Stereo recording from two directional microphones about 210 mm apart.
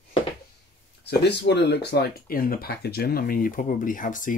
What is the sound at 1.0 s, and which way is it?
Speech, 55° left (ahead or behind).